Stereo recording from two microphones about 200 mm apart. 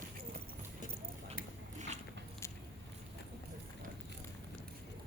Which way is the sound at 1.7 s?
35° right (ahead or behind).